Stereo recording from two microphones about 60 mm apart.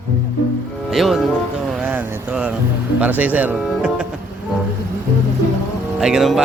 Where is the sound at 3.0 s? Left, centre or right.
Right.